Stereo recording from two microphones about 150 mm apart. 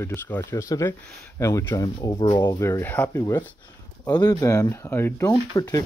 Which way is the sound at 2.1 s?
35° left (ahead or behind).